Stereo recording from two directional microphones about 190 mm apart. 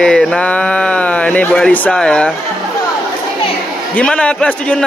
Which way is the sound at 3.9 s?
5° left (ahead or behind).